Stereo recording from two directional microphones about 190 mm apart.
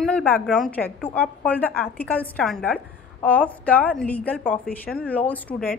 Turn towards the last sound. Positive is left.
turn(degrees=5)  # may be behind; listen again after turning